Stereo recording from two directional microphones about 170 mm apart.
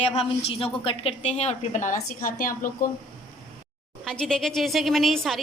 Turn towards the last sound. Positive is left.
turn(degrees=0)  # may be behind; listen again after turning